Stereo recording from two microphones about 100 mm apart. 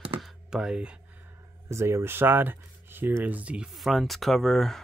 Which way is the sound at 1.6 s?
25° right (ahead or behind).